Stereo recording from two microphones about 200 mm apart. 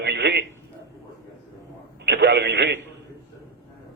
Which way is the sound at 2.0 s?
55° right (ahead or behind).